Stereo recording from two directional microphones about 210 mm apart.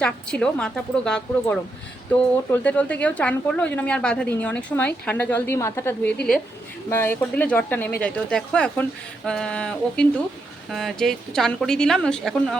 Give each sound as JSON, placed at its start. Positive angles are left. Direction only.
{"t": 0.0, "sound": "a woman's voice", "side_deg": 5}